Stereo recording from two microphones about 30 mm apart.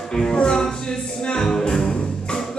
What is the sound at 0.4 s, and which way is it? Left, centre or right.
Music, left.